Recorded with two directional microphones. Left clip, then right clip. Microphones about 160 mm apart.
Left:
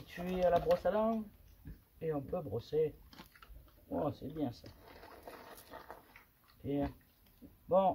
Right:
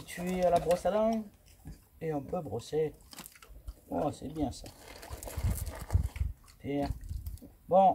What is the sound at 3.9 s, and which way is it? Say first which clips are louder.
Speech: right 4 dB; 20° left (ahead or behind).